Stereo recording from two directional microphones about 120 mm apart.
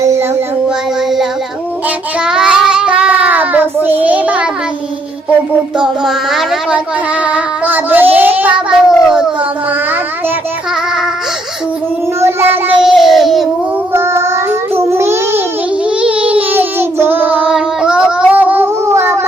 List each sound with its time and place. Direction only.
2.2 s child singing: 5° right (ahead or behind)
5.7 s child singing: 5° right (ahead or behind)
12.2 s child singing: 20° right (ahead or behind)
12.8 s child singing: centre (ahead or behind)
13.9 s child singing: 20° right (ahead or behind)
14.8 s a sound: 20° right (ahead or behind)
16.0 s child singing: 10° right (ahead or behind)